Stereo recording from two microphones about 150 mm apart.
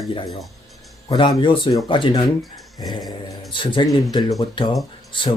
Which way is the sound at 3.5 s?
35° left (ahead or behind).